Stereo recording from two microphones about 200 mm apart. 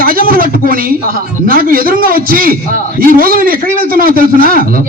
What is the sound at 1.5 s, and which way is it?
Music, 45° right (ahead or behind).